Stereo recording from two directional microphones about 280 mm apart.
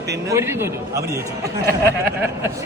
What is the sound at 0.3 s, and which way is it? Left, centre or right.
Speech, centre.